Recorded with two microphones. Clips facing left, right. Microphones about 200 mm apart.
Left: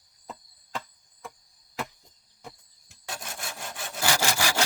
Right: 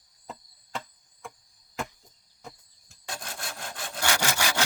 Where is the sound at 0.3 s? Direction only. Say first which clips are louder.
Even; centre (ahead or behind).